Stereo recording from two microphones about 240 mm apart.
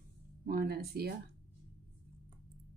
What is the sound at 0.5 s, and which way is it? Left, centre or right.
Speech, right.